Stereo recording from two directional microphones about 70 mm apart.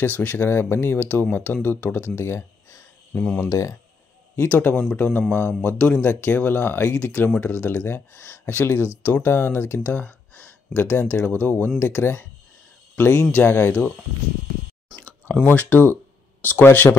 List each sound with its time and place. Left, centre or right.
0.0 s speech: left
3.1 s speech: centre
3.3 s speech: left
4.5 s speech: left
15.2 s speech: left